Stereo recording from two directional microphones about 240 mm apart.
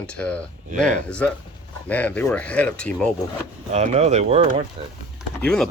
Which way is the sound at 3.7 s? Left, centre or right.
Right.